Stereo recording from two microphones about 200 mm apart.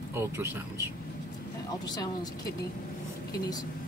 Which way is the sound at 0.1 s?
15° right (ahead or behind).